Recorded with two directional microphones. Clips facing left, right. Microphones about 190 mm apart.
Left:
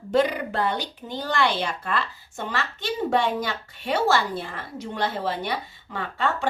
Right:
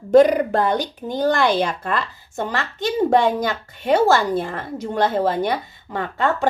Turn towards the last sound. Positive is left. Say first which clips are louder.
# right 5 dB
turn(degrees=-45)  # may be behind; listen again after turning